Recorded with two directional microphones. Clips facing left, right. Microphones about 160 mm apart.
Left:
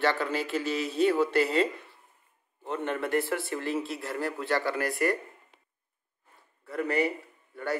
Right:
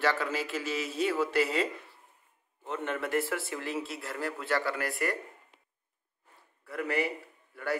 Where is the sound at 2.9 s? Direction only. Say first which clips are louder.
Left 2 dB; 5° right (ahead or behind).